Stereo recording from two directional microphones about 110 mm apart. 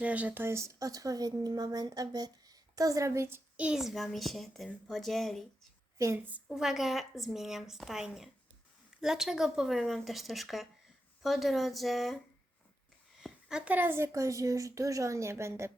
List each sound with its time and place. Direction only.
0.0 s speech: 15° right (ahead or behind)
3.7 s a woman's voice: 5° right (ahead or behind)
6.0 s a woman's voice: 30° right (ahead or behind)
6.5 s a woman's voice: 5° right (ahead or behind); by 15.7 s 25° right (ahead or behind)